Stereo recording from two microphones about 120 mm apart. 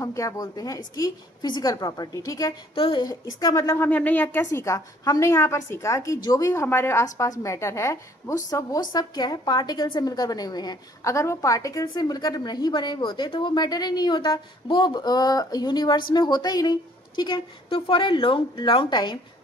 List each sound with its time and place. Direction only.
0.0 s a woman's voice: 25° left (ahead or behind)
2.7 s a woman's voice: 50° left (ahead or behind)
3.1 s a woman's voice: 30° left (ahead or behind)